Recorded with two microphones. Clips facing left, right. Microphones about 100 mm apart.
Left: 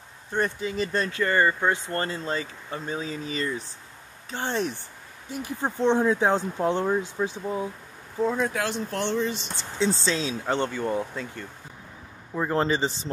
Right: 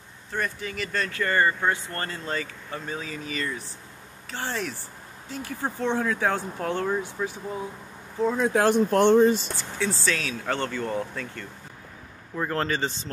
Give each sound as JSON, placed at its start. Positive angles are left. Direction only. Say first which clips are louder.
{"t": 0.3, "sound": "speech", "louder": "left 4 dB", "side_deg": 20}
{"t": 8.2, "sound": "speech", "louder": "even", "side_deg": 0}
{"t": 8.6, "sound": "speech", "louder": "right 9 dB", "side_deg": -50}
{"t": 9.6, "sound": "speech", "louder": "left 3 dB", "side_deg": 20}